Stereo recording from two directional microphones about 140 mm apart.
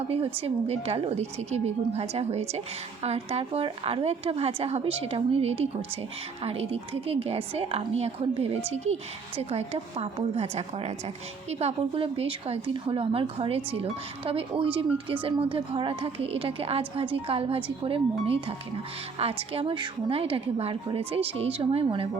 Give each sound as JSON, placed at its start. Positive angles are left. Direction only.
{"t": 0.4, "sound": "a woman's voice", "side_deg": -45}